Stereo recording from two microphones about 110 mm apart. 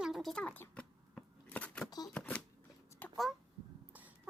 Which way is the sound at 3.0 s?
15° left (ahead or behind).